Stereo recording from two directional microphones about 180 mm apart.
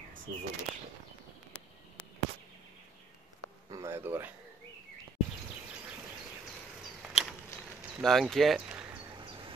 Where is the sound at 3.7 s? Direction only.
15° right (ahead or behind).